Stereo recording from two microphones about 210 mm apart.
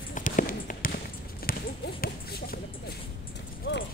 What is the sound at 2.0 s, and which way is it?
Speech, 45° left (ahead or behind).